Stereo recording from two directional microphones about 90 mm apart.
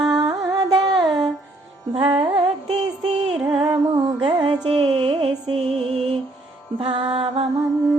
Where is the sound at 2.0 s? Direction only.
65° right (ahead or behind).